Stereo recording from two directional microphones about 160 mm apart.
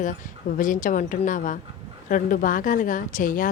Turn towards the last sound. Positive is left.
turn(degrees=55)  # may be behind; listen again after turning